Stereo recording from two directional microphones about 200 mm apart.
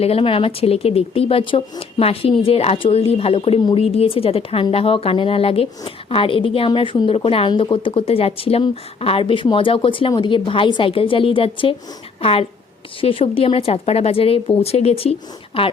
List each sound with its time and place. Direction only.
0.0 s speech: 30° left (ahead or behind)